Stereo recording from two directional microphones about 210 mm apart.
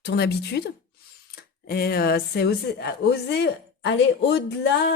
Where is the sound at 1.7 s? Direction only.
45° left (ahead or behind).